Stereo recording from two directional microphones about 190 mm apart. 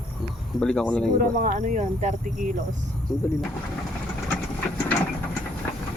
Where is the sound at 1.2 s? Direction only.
40° right (ahead or behind).